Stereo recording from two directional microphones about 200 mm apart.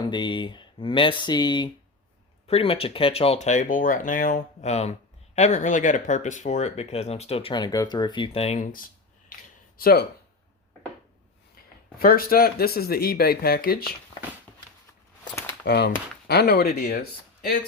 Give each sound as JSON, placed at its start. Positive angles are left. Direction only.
{"t": 0.0, "sound": "speech", "side_deg": 25}
{"t": 9.3, "sound": "a sound", "side_deg": 45}
{"t": 11.9, "sound": "speech", "side_deg": 45}
{"t": 15.6, "sound": "speech", "side_deg": 55}